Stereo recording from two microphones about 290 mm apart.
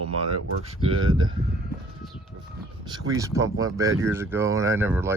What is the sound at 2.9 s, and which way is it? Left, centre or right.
Speech, centre.